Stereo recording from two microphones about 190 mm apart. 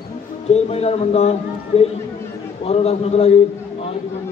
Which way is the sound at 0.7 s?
35° left (ahead or behind).